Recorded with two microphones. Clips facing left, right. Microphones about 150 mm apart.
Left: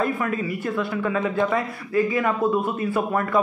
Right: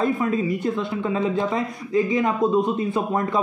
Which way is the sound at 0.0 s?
20° right (ahead or behind).